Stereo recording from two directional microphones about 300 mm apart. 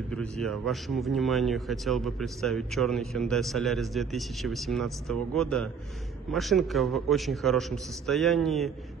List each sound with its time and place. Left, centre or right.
0.1 s speech: centre